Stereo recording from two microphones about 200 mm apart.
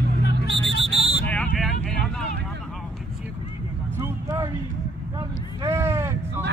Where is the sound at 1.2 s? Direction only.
5° left (ahead or behind).